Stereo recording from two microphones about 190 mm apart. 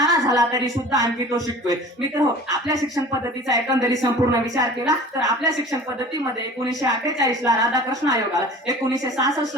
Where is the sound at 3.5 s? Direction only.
15° right (ahead or behind).